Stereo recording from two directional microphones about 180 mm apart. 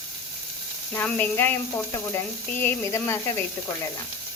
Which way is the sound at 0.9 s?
10° left (ahead or behind).